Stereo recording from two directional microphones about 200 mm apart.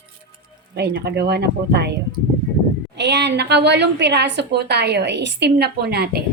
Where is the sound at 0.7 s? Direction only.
55° right (ahead or behind).